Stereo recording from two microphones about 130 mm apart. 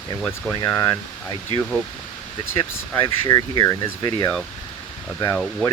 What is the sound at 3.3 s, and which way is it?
Speech, 25° left (ahead or behind).